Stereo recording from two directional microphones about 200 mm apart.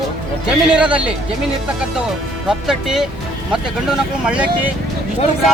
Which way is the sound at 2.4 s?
5° right (ahead or behind).